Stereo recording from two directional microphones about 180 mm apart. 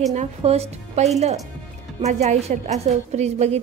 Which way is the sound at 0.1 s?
40° right (ahead or behind).